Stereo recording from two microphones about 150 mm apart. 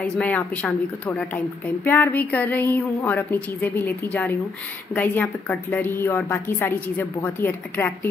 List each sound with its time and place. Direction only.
0.0 s a woman's voice: 10° left (ahead or behind)